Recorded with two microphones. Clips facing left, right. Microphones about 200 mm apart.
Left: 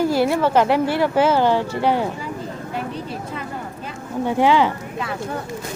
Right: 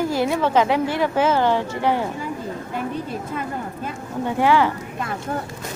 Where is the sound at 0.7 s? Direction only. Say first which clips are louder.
Left 2 dB; 15° right (ahead or behind).